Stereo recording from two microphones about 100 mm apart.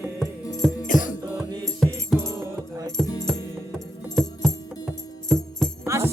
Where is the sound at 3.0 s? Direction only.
Centre (ahead or behind).